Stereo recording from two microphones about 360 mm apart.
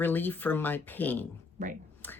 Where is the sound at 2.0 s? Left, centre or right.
Centre.